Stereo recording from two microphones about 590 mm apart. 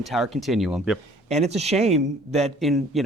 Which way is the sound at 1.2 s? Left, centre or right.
Centre.